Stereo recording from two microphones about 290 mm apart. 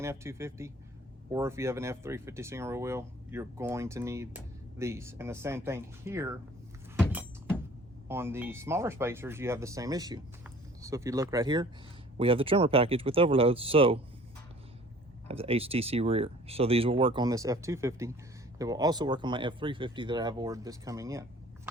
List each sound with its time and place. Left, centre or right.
0.0 s speech: centre
8.0 s speech: centre
15.3 s speech: centre